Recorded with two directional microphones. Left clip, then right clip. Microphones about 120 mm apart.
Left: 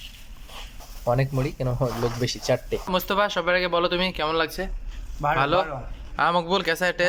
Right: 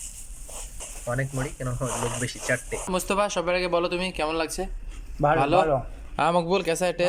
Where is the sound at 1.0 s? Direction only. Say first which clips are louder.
Left 5 dB; 35° left (ahead or behind).